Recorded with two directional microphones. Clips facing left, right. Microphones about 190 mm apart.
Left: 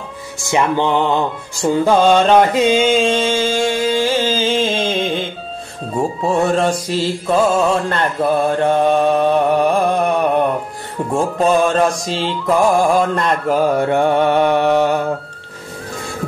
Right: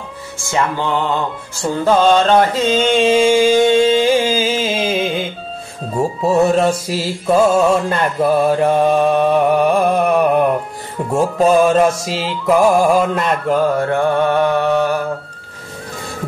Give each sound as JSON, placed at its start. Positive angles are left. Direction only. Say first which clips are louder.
{"t": 0.4, "sound": "a sound", "louder": "left 3 dB", "side_deg": 15}
{"t": 3.0, "sound": "music", "louder": "right 4 dB", "side_deg": -10}
{"t": 5.9, "sound": "mantra", "louder": "right 2 dB", "side_deg": 0}
{"t": 13.7, "sound": "mantra", "louder": "left 1 dB", "side_deg": 20}